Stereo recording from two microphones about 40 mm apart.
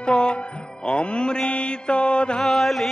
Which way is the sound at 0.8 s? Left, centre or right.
Left.